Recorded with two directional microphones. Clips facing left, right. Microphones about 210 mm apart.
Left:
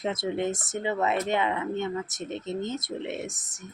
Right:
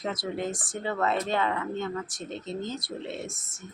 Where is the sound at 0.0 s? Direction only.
25° left (ahead or behind).